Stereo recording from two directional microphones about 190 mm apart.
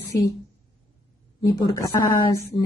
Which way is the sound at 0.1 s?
15° left (ahead or behind).